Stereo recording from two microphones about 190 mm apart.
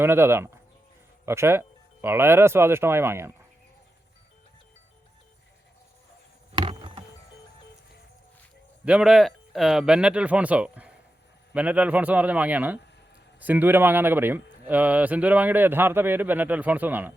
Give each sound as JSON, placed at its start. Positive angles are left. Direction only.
{"t": 0.0, "sound": "a man's voice", "side_deg": -10}
{"t": 6.6, "sound": "keys jangling", "side_deg": -25}
{"t": 8.8, "sound": "a man's voice", "side_deg": -5}